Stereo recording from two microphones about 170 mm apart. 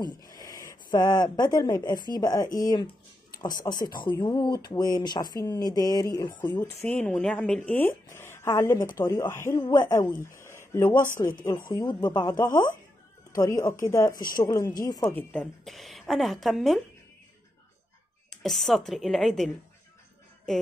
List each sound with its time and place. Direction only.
0.0 s speech: 25° left (ahead or behind)
15.1 s a woman's voice: 5° left (ahead or behind)
18.3 s a woman's voice: centre (ahead or behind)